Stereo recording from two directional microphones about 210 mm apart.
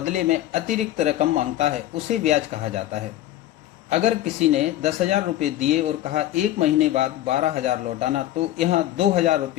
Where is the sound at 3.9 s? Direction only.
30° right (ahead or behind).